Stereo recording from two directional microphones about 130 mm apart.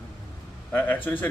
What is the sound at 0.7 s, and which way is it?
Speech, 15° left (ahead or behind).